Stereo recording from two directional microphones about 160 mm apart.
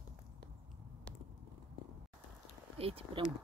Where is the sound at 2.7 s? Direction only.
35° right (ahead or behind).